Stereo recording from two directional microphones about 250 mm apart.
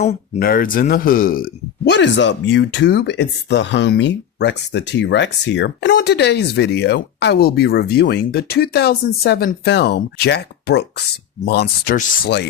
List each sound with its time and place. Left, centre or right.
0.0 s speech: left